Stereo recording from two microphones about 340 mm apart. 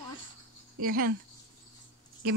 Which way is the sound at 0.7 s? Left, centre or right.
Right.